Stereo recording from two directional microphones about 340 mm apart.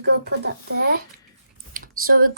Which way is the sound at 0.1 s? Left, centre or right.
Right.